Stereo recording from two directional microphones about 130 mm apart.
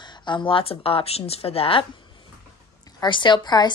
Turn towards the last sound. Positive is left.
turn(degrees=30)  # may be behind; listen again after turning